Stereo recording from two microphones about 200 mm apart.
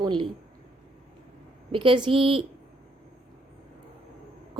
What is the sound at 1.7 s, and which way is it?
Speech, 25° right (ahead or behind).